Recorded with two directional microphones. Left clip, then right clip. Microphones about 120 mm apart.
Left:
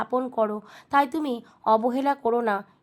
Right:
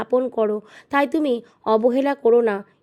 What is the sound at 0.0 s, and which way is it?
A woman's voice, 35° right (ahead or behind).